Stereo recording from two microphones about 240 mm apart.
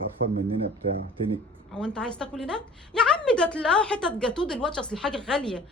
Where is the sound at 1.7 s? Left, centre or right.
Centre.